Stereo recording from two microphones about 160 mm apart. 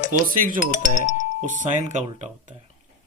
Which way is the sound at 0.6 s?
50° left (ahead or behind).